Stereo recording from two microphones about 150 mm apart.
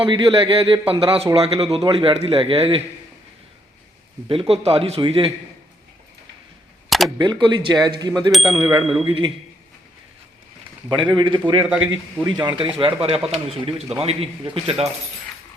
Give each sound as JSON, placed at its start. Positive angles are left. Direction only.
{"t": 0.0, "sound": "speech", "side_deg": -35}
{"t": 4.3, "sound": "speech", "side_deg": -40}
{"t": 7.2, "sound": "speech", "side_deg": -30}
{"t": 8.8, "sound": "speech", "side_deg": 0}
{"t": 9.0, "sound": "speech", "side_deg": -35}
{"t": 10.8, "sound": "speech", "side_deg": -30}
{"t": 11.6, "sound": "a man's voice", "side_deg": -5}
{"t": 12.2, "sound": "speech", "side_deg": -30}